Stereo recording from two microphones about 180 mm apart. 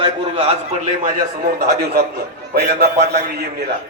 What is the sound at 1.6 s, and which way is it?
A man's voice, 60° right (ahead or behind).